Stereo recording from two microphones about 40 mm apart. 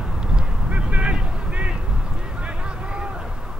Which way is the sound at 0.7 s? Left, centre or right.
Right.